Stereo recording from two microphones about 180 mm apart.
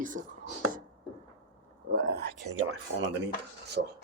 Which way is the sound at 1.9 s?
60° right (ahead or behind).